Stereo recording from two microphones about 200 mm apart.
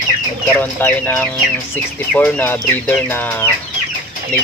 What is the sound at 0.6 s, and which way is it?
Speech, 10° left (ahead or behind).